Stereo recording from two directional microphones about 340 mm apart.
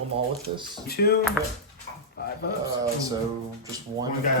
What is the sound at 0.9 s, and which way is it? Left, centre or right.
Speech, left.